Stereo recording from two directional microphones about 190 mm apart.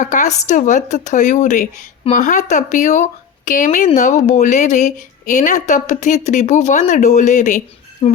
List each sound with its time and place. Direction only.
0.0 s a woman's voice: 40° left (ahead or behind)
8.0 s speech: 30° left (ahead or behind)